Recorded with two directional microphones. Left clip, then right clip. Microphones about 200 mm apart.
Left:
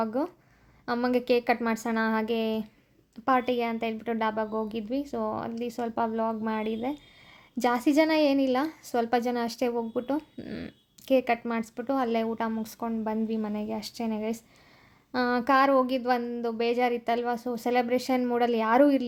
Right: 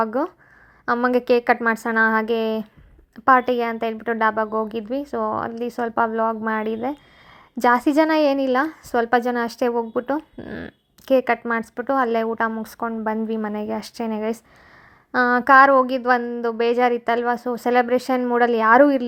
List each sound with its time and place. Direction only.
0.0 s a woman's voice: 15° right (ahead or behind)